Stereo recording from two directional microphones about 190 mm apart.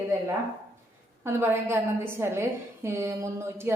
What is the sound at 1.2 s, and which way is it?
A woman's voice, 10° right (ahead or behind).